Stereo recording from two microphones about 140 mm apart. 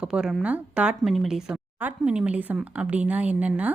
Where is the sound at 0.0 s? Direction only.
5° right (ahead or behind).